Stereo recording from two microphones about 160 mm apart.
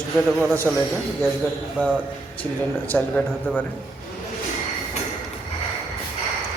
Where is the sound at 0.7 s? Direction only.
5° left (ahead or behind).